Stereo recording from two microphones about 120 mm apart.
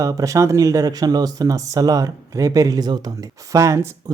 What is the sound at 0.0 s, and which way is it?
Speech, 30° right (ahead or behind).